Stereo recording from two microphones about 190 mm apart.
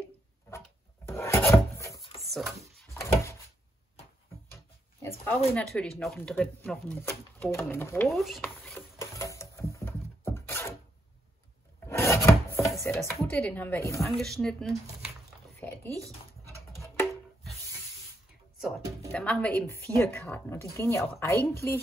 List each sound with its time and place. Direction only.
1.0 s filing: 15° left (ahead or behind)
2.2 s a sound: centre (ahead or behind)
2.9 s door: 15° left (ahead or behind)
5.0 s speech: 10° left (ahead or behind)
8.1 s speech: centre (ahead or behind)
8.9 s a sound: 15° left (ahead or behind)
11.8 s wood: 15° left (ahead or behind)
12.9 s speech: 5° left (ahead or behind)
14.1 s speech: centre (ahead or behind)
16.5 s music: 15° left (ahead or behind)
19.1 s speech: 5° left (ahead or behind)